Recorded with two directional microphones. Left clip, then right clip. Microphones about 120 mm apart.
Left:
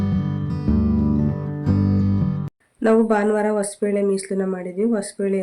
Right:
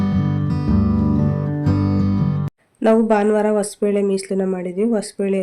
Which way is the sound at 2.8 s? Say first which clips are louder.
Right 2 dB; 40° right (ahead or behind).